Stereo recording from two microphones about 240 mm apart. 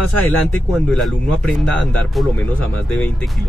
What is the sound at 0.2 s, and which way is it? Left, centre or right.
Speech, centre.